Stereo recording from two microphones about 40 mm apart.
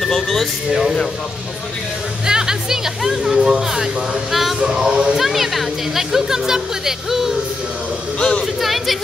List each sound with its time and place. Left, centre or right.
0.0 s speech: centre
0.7 s speech: centre
2.2 s speech: centre
4.3 s music: centre
4.6 s speech: right
5.1 s speech: centre
8.2 s speech: centre
8.5 s speech: centre